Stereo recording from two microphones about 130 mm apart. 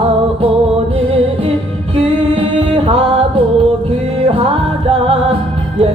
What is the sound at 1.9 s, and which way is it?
Singing, 45° right (ahead or behind).